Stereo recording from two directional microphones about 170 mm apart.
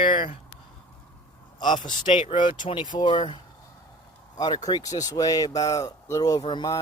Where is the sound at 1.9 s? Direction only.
30° left (ahead or behind).